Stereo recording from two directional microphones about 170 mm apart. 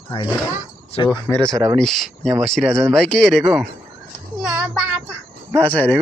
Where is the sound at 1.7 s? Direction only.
Centre (ahead or behind).